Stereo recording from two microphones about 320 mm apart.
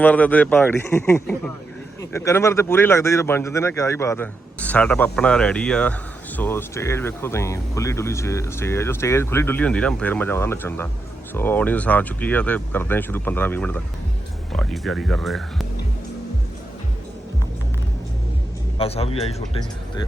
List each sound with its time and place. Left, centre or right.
0.0 s speech: centre
18.8 s a man's voice: centre